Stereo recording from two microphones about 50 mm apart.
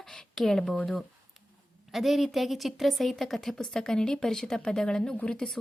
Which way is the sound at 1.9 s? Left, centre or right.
Centre.